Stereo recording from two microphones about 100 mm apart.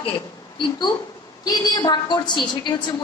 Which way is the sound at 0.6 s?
50° left (ahead or behind).